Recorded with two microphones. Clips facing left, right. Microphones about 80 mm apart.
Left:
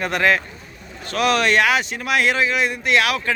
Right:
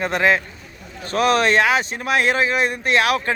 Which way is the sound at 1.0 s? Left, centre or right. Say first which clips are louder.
Right 2 dB; right.